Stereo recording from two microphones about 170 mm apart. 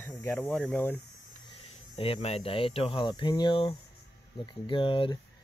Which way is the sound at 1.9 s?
35° left (ahead or behind).